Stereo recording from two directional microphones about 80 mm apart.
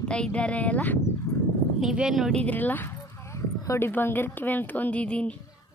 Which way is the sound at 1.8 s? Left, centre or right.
Centre.